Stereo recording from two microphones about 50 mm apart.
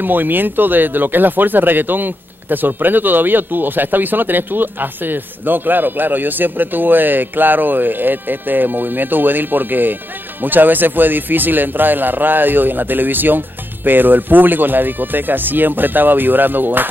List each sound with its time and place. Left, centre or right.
0.0 s speech: right